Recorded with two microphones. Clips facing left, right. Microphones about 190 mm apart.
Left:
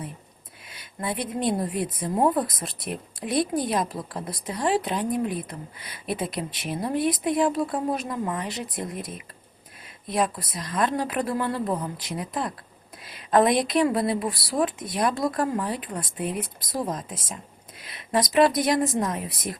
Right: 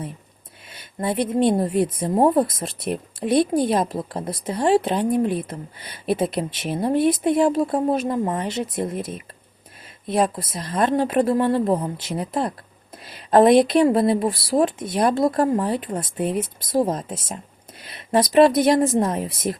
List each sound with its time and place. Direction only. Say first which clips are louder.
1.0 s speech: right 7 dB; 25° right (ahead or behind)
13.9 s speech: right 6 dB; 25° right (ahead or behind)